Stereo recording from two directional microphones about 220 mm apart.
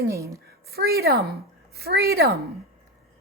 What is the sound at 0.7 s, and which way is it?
A woman's voice, 45° right (ahead or behind).